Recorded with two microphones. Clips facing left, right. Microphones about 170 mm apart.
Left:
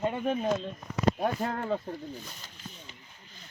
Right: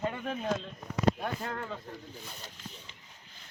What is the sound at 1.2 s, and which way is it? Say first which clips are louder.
Speech: left 6 dB; 35° left (ahead or behind).